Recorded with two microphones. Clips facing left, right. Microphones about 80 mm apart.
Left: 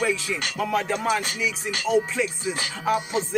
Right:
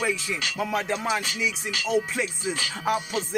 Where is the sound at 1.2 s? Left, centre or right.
Left.